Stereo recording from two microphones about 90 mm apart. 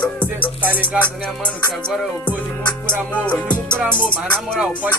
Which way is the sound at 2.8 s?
15° left (ahead or behind).